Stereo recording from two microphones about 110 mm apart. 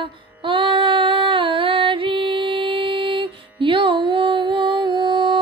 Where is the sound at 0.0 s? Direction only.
50° right (ahead or behind).